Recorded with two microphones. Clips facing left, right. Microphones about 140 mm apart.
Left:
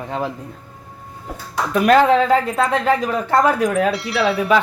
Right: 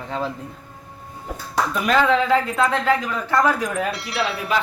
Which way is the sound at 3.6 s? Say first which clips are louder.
Left 7 dB; 90° left.